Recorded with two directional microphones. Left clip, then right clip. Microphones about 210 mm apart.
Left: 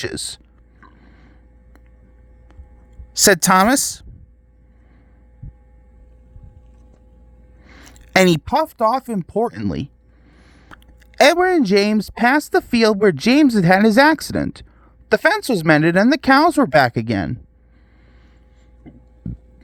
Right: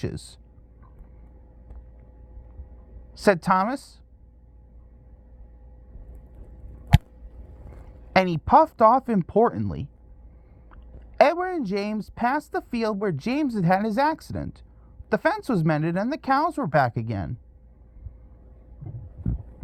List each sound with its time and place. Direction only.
0.0 s a sound: 55° left (ahead or behind)
3.1 s speech: 50° left (ahead or behind)
7.9 s a sound: 50° left (ahead or behind)
9.0 s speech: centre (ahead or behind)
9.5 s speech: 45° left (ahead or behind)
11.2 s speech: 50° left (ahead or behind)